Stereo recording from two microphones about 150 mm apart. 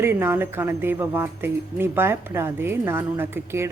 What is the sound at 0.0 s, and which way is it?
A woman's voice, 15° right (ahead or behind).